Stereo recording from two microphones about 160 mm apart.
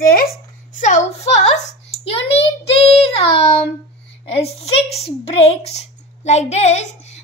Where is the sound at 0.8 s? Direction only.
45° left (ahead or behind).